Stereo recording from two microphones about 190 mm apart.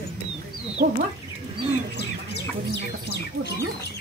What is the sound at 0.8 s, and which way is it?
Speech, 65° right (ahead or behind).